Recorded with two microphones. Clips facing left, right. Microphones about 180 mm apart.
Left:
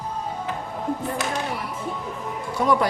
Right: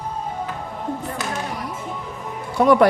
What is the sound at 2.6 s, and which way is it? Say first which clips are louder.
Music: right 6 dB; 65° right (ahead or behind).